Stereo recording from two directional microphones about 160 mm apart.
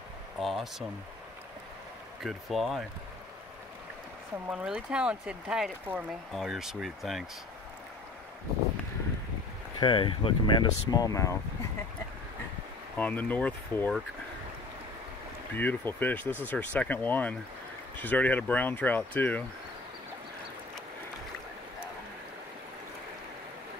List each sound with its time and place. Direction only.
0.4 s speech: centre (ahead or behind)
2.2 s speech: centre (ahead or behind)
4.5 s speech: 5° right (ahead or behind)
9.8 s speech: 30° left (ahead or behind)
12.9 s speech: 10° left (ahead or behind)
15.5 s speech: 15° left (ahead or behind)